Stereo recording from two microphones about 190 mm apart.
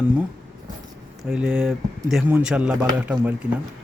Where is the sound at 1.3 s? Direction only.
5° right (ahead or behind).